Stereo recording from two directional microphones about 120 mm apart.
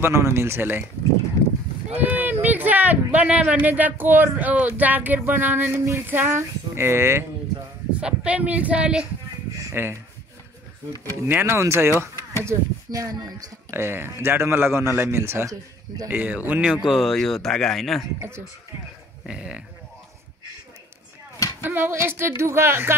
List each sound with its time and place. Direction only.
0.0 s a man's voice: 20° right (ahead or behind)
2.0 s a sound: 15° right (ahead or behind)
2.4 s speech: 15° right (ahead or behind)
7.9 s speech: 10° right (ahead or behind)
11.2 s a man's voice: 20° right (ahead or behind); by 18.0 s centre (ahead or behind)
19.2 s speech: 5° right (ahead or behind)
21.6 s a man's voice: 15° right (ahead or behind)